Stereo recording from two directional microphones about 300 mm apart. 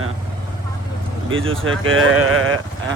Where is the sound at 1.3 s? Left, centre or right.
Right.